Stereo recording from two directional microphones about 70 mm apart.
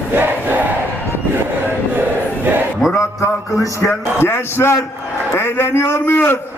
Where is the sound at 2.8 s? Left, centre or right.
Centre.